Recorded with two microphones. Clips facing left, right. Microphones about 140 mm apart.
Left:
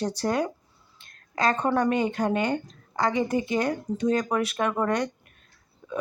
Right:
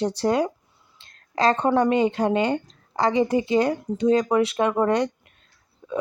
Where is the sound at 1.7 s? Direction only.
25° right (ahead or behind).